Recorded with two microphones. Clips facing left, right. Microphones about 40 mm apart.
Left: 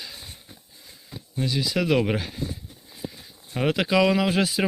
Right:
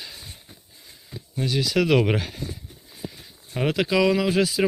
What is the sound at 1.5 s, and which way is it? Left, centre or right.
Speech, right.